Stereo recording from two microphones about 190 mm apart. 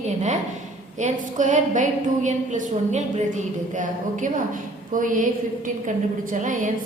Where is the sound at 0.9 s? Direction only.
40° right (ahead or behind).